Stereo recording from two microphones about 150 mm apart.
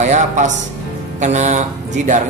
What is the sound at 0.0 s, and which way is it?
Speech, 55° right (ahead or behind).